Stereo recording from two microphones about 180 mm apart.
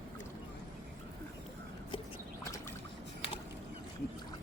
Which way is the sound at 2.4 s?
15° left (ahead or behind).